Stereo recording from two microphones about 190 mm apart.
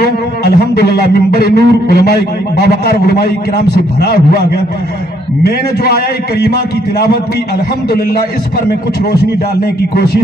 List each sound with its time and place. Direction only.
0.0 s speech: 60° left (ahead or behind)
9.8 s speech: 55° left (ahead or behind)